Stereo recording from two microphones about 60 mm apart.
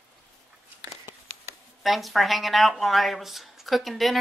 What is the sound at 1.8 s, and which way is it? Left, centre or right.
Speech, centre.